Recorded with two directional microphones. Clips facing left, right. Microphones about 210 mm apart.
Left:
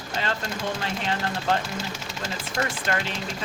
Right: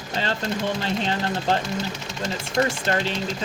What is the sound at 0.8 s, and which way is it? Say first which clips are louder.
Speech: right 3 dB; 30° right (ahead or behind).